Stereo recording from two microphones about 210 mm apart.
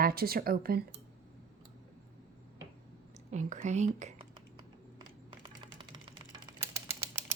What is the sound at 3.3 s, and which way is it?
Speech, 35° right (ahead or behind).